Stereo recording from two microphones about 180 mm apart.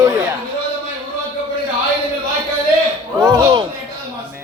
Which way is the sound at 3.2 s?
25° right (ahead or behind).